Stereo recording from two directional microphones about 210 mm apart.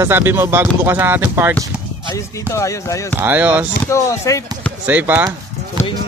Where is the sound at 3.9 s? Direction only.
15° left (ahead or behind).